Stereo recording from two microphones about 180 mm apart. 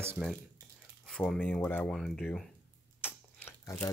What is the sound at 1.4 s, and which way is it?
Speech, 10° left (ahead or behind).